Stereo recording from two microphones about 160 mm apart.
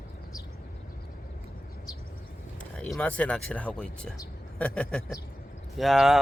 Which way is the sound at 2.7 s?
5° left (ahead or behind).